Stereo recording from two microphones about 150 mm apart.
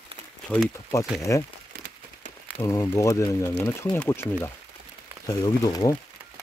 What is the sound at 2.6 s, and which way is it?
Speech, 20° left (ahead or behind).